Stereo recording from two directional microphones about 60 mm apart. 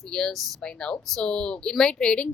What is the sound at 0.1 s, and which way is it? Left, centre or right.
A woman's voice, centre.